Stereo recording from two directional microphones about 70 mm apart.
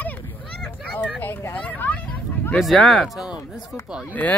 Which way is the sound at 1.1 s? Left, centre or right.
Left.